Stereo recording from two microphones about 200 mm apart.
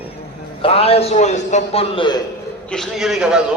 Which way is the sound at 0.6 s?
30° left (ahead or behind).